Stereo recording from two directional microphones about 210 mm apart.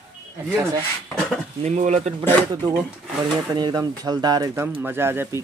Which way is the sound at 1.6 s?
35° right (ahead or behind).